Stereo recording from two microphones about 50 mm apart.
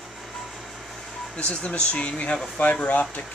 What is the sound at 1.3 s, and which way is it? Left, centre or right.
Speech, left.